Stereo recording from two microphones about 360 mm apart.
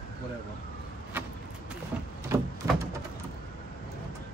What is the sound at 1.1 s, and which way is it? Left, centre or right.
Vehicle, centre.